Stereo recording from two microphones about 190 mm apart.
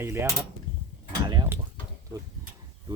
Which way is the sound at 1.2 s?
20° right (ahead or behind).